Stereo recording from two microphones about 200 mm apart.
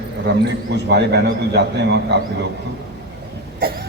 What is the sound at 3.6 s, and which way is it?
Cough, 50° right (ahead or behind).